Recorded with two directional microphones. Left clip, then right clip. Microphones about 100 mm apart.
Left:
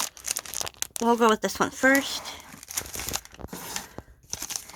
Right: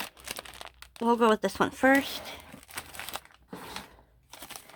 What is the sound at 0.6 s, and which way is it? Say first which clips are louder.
Crumpling: left 11 dB; 65° left (ahead or behind).